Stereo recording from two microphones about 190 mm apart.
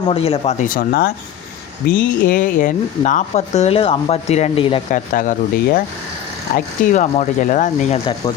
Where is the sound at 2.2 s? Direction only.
45° left (ahead or behind); by 4.8 s 30° left (ahead or behind).